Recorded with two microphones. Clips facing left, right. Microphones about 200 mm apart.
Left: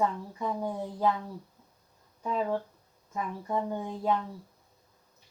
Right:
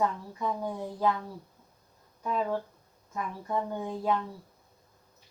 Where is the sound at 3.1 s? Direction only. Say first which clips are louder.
Left 1 dB; 15° left (ahead or behind).